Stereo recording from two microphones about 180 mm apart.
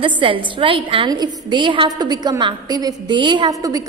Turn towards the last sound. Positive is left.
turn(degrees=-20)  # may be behind; listen again after turning